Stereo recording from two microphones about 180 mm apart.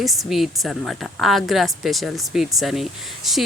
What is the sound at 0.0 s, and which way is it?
Speech, centre (ahead or behind).